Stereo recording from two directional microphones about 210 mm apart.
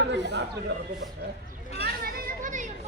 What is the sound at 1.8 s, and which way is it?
Children playing, 45° right (ahead or behind).